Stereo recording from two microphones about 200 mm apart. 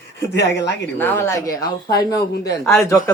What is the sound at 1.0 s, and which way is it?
Speech, 10° left (ahead or behind).